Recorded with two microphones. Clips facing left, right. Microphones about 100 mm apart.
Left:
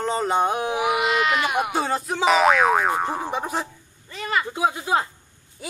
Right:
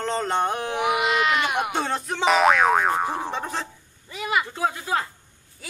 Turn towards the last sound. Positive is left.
turn(degrees=20)  # may be behind; listen again after turning